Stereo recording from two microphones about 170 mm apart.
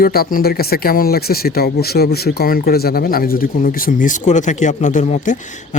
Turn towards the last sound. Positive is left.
turn(degrees=45)  # may be behind; listen again after turning